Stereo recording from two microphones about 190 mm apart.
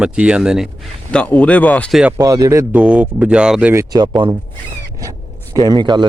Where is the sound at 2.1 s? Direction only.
20° right (ahead or behind).